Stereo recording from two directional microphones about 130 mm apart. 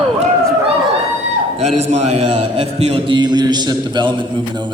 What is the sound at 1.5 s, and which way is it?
A man's voice, 55° right (ahead or behind).